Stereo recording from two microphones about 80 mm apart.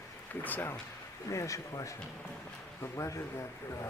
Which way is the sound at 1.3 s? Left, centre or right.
Left.